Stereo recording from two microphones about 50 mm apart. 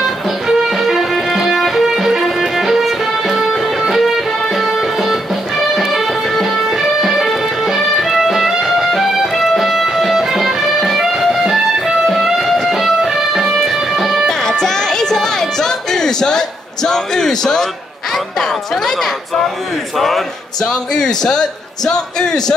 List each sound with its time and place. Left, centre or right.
0.0 s music: centre
14.2 s music: centre
20.0 s a man's voice: centre